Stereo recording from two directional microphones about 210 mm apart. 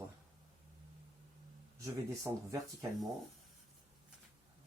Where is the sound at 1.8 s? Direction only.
15° right (ahead or behind).